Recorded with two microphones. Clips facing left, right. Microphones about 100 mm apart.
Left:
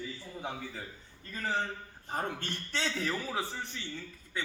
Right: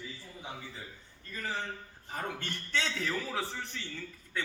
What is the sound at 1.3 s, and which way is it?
A man's voice, 35° left (ahead or behind).